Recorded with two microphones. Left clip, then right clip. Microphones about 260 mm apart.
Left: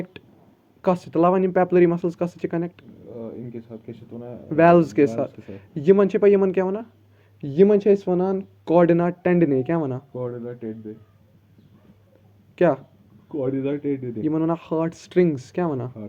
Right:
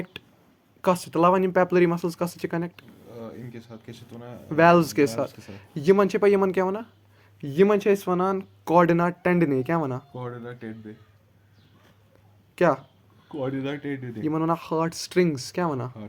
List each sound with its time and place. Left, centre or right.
0.8 s speech: right
12.5 s speech: right
13.2 s speech: right